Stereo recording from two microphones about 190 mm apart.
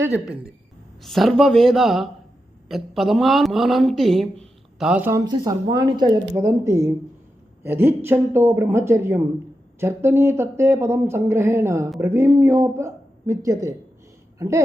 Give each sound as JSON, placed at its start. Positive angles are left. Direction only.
{"t": 0.0, "sound": "a woman's voice", "side_deg": -5}